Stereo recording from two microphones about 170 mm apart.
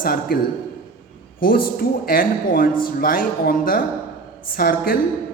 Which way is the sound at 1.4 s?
60° left (ahead or behind).